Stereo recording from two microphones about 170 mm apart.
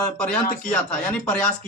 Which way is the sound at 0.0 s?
5° left (ahead or behind).